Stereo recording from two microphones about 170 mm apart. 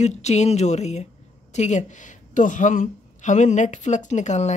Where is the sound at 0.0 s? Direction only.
40° left (ahead or behind).